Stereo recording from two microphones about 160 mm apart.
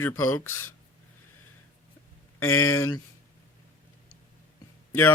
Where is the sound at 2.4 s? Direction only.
15° left (ahead or behind).